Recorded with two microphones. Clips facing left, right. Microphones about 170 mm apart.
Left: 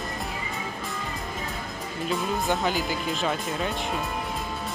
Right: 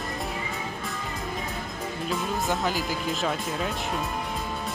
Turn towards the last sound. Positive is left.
turn(degrees=0)  # may be behind; listen again after turning